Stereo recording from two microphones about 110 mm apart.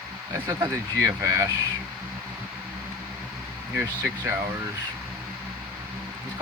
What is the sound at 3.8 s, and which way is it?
Speech, 15° right (ahead or behind).